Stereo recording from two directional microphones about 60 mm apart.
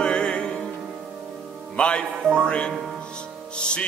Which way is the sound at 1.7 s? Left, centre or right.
Centre.